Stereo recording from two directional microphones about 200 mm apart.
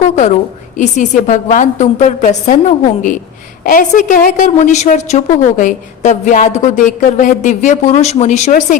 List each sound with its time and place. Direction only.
0.8 s a woman's voice: 35° left (ahead or behind)